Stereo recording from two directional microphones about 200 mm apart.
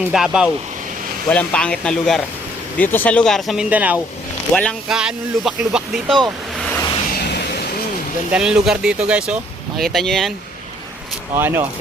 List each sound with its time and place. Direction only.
0.0 s speech: 5° right (ahead or behind)
7.2 s vehicle: 55° left (ahead or behind)
8.3 s speech: 5° right (ahead or behind)
11.3 s speech: 10° right (ahead or behind)